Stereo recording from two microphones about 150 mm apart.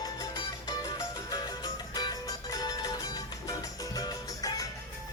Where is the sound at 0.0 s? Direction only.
25° left (ahead or behind).